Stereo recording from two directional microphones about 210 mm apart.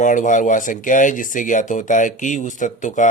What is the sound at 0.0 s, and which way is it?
Speech, 35° left (ahead or behind).